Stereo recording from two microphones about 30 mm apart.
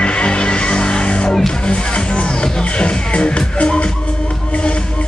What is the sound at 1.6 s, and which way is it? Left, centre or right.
Music, left.